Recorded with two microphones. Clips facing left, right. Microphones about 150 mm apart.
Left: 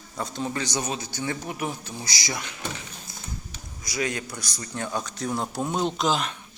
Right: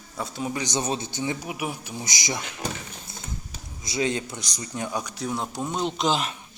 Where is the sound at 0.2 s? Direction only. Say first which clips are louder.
Even; 5° right (ahead or behind); by 2.4 s 20° right (ahead or behind).